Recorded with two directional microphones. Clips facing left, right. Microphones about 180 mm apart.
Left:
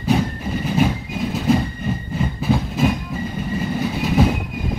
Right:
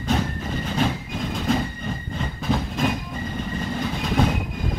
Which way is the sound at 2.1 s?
5° left (ahead or behind).